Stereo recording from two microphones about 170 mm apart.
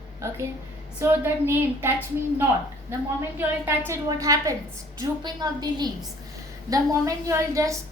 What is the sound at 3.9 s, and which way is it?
A woman's voice, 20° right (ahead or behind).